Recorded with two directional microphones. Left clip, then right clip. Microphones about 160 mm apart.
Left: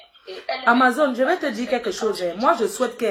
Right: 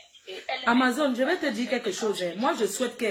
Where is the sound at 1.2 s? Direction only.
20° right (ahead or behind).